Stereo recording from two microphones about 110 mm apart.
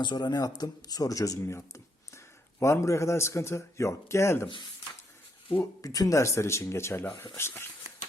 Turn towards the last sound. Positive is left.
turn(degrees=25)  # may be behind; listen again after turning